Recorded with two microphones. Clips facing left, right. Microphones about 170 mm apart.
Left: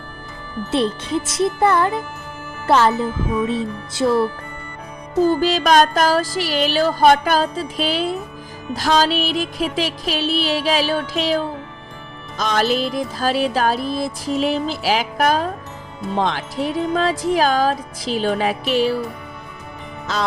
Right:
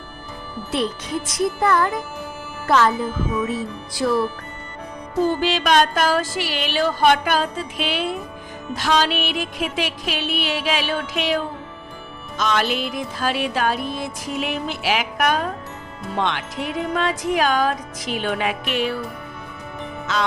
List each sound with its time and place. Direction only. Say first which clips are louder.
0.7 s music: left 4 dB; 25° left (ahead or behind)
2.6 s speech: left 2 dB; 30° left (ahead or behind)
3.4 s music: left 3 dB; 25° left (ahead or behind)
5.2 s music: left 3 dB; 40° left (ahead or behind)
20.1 s music: even; 35° left (ahead or behind)